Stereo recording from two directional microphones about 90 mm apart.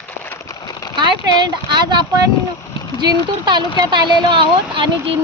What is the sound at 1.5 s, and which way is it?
Speech, 55° right (ahead or behind).